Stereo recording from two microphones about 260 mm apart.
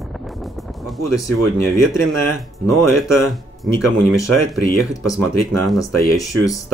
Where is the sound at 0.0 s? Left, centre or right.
Centre.